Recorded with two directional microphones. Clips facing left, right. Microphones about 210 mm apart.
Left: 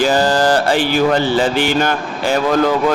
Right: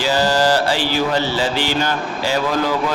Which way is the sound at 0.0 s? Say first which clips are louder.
Left 3 dB; 50° left (ahead or behind).